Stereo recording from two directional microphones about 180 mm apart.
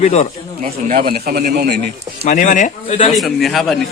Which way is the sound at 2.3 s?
45° left (ahead or behind).